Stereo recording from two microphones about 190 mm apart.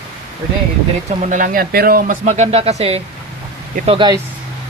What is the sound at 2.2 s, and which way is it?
Speech, 35° right (ahead or behind).